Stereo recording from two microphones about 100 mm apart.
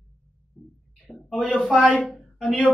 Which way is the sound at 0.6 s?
20° left (ahead or behind).